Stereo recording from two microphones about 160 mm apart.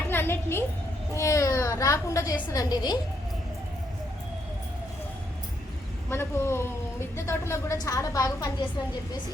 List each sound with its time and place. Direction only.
0.1 s a sound: 15° left (ahead or behind)
1.1 s a child's voice: 20° left (ahead or behind)
6.1 s speech: 15° left (ahead or behind)